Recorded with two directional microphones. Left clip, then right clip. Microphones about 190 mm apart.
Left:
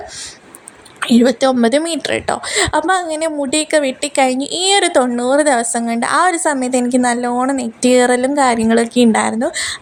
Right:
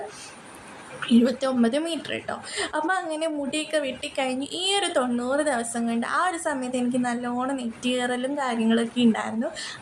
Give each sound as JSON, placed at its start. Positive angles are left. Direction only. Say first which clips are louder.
{"t": 0.9, "sound": "a woman's voice", "louder": "left 10 dB", "side_deg": 35}